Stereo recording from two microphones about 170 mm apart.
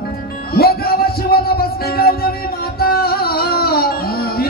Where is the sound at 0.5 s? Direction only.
65° left (ahead or behind).